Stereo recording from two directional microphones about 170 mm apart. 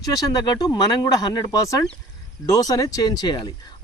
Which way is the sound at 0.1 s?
20° left (ahead or behind).